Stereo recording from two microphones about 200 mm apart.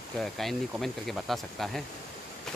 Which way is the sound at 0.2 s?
Centre (ahead or behind).